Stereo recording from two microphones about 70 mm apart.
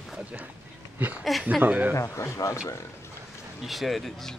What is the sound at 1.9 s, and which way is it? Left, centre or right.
Speech, left.